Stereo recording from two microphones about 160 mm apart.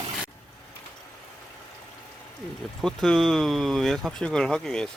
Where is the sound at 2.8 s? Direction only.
5° left (ahead or behind).